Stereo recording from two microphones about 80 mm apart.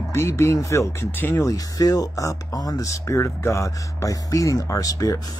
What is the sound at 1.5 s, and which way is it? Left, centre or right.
Speech, left.